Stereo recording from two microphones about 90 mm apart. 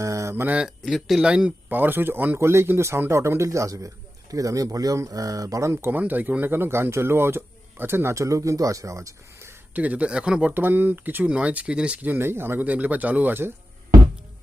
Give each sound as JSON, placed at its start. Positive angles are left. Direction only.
{"t": 0.0, "sound": "a sound", "side_deg": -35}
{"t": 0.8, "sound": "speech", "side_deg": 0}
{"t": 5.7, "sound": "speech", "side_deg": -20}
{"t": 9.7, "sound": "speech", "side_deg": -15}
{"t": 10.5, "sound": "speech", "side_deg": -25}